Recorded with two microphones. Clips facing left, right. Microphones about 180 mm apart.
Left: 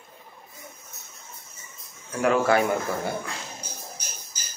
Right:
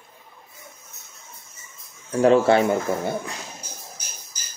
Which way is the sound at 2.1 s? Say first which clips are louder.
Right 5 dB; 30° right (ahead or behind).